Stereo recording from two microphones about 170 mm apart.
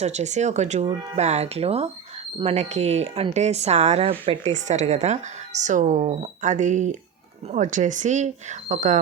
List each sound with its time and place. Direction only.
0.0 s speech: 40° right (ahead or behind)